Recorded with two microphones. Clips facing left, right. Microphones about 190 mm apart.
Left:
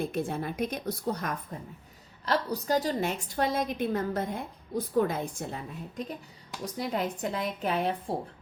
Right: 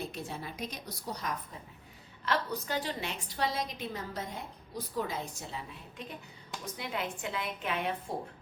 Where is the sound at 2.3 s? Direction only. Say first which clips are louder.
Left 5 dB; 40° left (ahead or behind).